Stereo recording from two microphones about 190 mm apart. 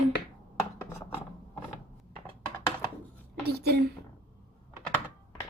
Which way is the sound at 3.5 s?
55° right (ahead or behind).